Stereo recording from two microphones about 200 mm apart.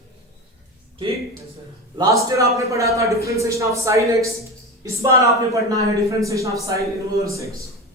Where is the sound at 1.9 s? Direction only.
15° right (ahead or behind).